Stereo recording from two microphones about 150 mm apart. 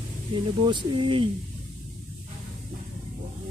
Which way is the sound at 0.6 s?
30° right (ahead or behind).